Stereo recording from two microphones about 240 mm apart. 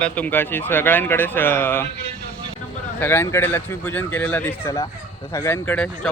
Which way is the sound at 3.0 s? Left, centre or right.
Centre.